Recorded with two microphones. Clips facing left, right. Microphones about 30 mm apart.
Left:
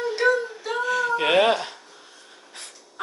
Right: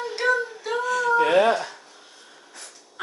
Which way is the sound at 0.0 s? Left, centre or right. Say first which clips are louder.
Left 2 dB; centre.